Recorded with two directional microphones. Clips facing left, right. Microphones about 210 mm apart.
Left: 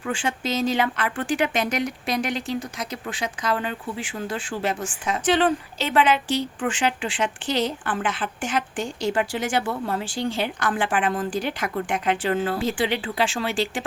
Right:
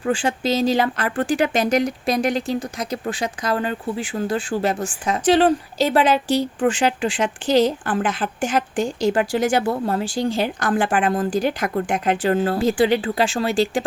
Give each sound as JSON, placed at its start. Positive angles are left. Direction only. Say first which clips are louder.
{"t": 0.0, "sound": "speech", "louder": "right 6 dB", "side_deg": -35}